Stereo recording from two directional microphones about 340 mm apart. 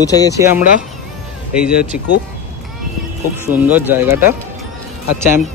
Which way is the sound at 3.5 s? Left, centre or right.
Centre.